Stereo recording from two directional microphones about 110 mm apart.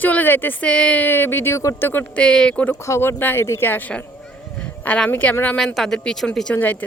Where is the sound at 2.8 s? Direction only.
25° left (ahead or behind).